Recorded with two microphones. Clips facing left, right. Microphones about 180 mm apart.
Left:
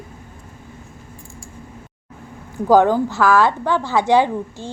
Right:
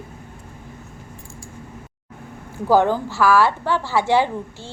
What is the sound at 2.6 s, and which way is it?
A woman's voice, 15° left (ahead or behind).